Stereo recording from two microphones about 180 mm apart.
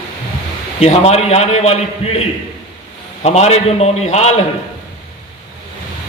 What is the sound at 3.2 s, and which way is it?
A man's voice, 35° left (ahead or behind).